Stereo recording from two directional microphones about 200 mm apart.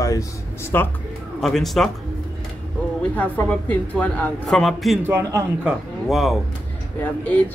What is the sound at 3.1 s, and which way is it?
Speech, 10° left (ahead or behind).